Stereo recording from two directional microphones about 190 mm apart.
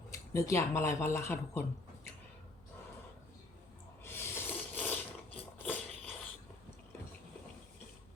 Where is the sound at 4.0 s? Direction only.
10° left (ahead or behind).